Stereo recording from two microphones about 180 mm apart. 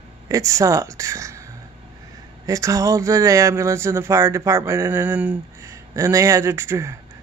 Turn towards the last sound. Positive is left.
turn(degrees=-15)  # may be behind; listen again after turning